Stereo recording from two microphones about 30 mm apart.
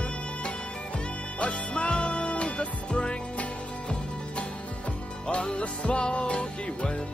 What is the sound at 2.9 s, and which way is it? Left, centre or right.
Music, left.